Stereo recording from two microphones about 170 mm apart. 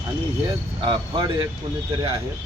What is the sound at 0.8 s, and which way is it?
Speech, 30° right (ahead or behind).